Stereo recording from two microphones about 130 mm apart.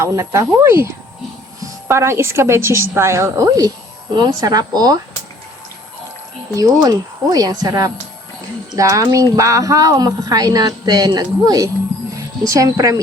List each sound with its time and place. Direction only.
0.0 s a woman's voice: 25° right (ahead or behind)
1.9 s a woman's voice: 20° right (ahead or behind)
6.5 s a woman's voice: 25° right (ahead or behind)